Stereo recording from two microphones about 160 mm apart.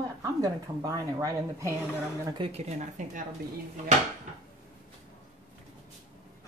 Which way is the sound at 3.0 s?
50° right (ahead or behind).